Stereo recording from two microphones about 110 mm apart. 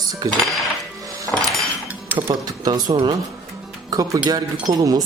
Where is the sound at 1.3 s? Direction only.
10° left (ahead or behind).